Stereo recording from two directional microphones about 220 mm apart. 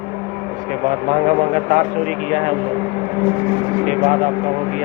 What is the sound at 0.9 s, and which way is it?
Speech, 35° right (ahead or behind).